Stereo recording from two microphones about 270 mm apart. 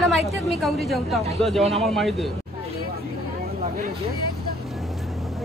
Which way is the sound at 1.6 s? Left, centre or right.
Right.